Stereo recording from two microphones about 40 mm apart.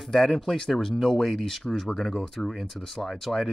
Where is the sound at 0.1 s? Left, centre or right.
Centre.